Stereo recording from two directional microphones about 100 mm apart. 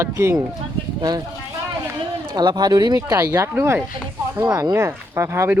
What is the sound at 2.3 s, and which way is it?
Speech, 45° right (ahead or behind).